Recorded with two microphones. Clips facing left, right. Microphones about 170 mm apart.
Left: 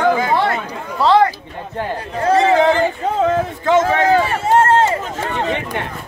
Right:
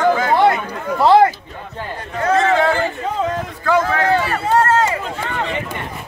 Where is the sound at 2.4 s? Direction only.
15° left (ahead or behind).